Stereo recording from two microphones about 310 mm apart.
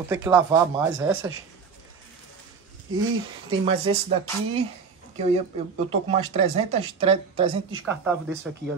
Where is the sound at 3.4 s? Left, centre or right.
Centre.